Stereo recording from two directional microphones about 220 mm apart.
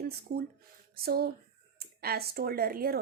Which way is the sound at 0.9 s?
45° right (ahead or behind).